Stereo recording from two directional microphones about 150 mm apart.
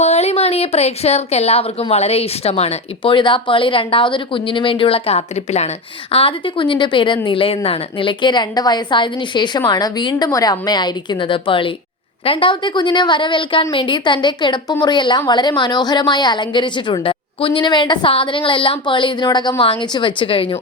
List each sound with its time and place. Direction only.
0.0 s a woman's voice: 45° left (ahead or behind)